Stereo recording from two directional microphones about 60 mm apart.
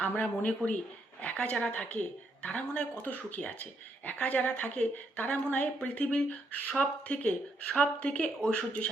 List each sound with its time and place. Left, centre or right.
0.0 s speech: left